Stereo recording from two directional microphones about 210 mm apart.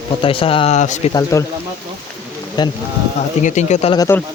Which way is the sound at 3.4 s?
35° left (ahead or behind).